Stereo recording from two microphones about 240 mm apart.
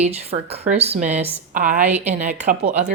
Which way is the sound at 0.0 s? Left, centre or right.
Right.